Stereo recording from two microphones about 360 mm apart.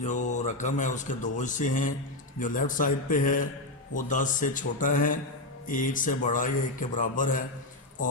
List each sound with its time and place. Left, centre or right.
0.0 s speech: centre